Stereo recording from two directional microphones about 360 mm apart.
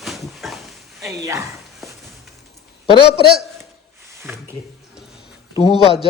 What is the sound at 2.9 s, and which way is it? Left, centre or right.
Speech, centre.